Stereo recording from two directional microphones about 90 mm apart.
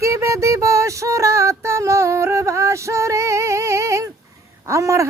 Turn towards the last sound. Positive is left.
turn(degrees=-35)  # may be behind; listen again after turning